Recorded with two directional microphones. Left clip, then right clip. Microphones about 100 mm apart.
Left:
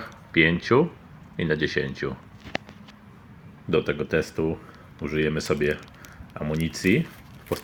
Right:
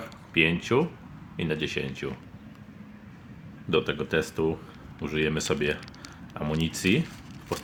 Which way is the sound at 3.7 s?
15° left (ahead or behind).